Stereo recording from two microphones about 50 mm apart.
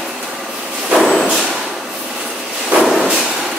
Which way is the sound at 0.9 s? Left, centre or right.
Centre.